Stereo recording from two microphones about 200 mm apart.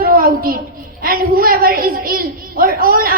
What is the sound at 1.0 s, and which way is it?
A woman's voice, 45° right (ahead or behind).